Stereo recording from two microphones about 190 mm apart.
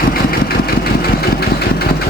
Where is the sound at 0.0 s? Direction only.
50° left (ahead or behind).